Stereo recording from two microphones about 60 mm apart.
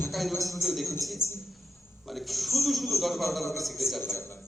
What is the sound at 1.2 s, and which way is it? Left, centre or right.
Speech, left.